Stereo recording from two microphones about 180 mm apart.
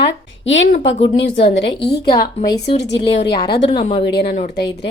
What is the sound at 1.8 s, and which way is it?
Speech, 65° left (ahead or behind).